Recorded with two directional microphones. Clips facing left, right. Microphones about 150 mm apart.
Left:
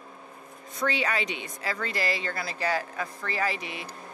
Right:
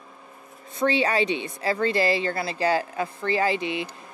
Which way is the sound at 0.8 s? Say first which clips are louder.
Right 6 dB; 30° right (ahead or behind).